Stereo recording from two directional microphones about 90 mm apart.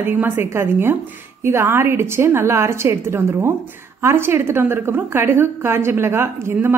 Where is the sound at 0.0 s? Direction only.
25° right (ahead or behind).